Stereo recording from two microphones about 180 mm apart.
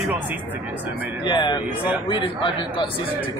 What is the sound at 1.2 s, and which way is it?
A man's voice, 25° left (ahead or behind).